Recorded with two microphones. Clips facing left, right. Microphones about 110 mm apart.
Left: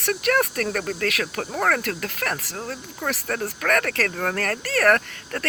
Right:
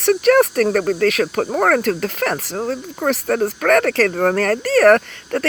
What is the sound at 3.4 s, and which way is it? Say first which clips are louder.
Speech: right 7 dB; 35° right (ahead or behind).